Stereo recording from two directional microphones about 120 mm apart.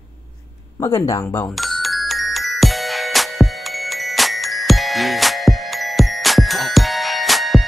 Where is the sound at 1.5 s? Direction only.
Centre (ahead or behind).